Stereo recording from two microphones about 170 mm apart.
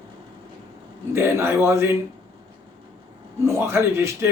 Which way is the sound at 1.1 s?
15° right (ahead or behind).